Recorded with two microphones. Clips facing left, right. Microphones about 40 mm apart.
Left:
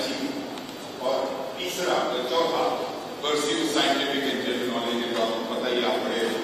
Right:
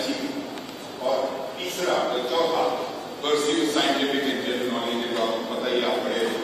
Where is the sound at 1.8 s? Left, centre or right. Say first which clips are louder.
Right 1 dB; centre.